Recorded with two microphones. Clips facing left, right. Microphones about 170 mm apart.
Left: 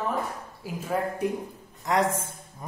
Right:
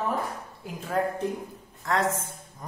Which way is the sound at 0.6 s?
5° left (ahead or behind).